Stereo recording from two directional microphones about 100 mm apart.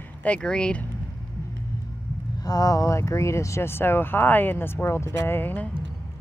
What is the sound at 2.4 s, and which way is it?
Speech, 40° left (ahead or behind).